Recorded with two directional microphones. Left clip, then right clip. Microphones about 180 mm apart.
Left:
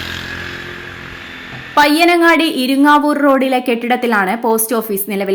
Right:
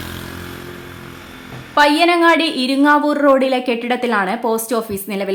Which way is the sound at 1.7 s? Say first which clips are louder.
Left 2 dB; 20° left (ahead or behind).